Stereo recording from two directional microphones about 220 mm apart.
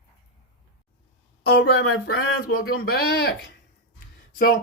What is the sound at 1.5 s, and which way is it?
Speech, 50° left (ahead or behind).